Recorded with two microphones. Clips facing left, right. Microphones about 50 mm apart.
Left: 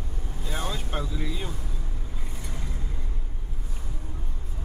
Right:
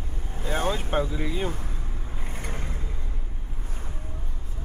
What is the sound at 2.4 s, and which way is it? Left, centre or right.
Mechanisms, right.